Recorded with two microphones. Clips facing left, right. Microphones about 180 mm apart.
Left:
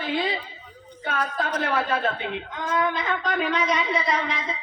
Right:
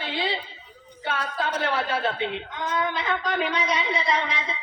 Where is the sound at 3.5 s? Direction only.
45° left (ahead or behind).